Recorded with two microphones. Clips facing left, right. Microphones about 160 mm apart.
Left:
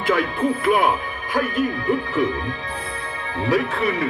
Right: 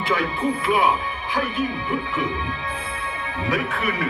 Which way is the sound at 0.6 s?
50° left (ahead or behind).